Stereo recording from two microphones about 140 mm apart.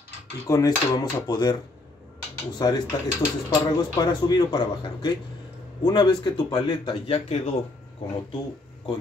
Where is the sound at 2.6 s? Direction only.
30° left (ahead or behind).